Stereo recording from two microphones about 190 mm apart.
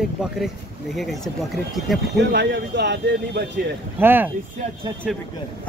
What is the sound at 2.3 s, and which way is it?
Speech, 60° right (ahead or behind).